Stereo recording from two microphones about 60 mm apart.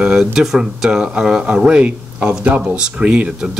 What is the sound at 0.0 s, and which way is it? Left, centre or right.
Speech, centre.